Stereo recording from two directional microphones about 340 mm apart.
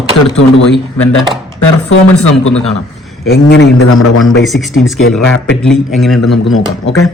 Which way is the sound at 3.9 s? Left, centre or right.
Left.